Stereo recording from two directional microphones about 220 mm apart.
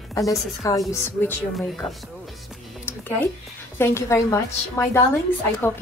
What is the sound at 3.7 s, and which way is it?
A woman's voice, 10° left (ahead or behind).